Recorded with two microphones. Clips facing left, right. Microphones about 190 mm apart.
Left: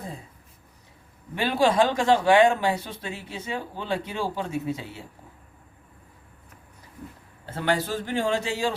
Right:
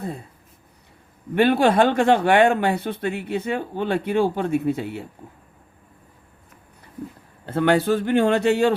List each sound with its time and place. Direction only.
1.4 s speech: 60° right (ahead or behind)
7.4 s speech: 60° right (ahead or behind)